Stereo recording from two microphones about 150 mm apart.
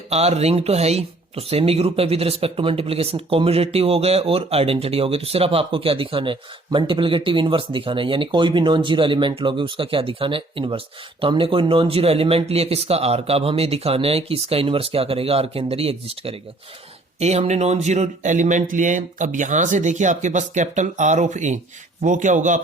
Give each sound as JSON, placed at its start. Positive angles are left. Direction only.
{"t": 0.1, "sound": "speech", "side_deg": -45}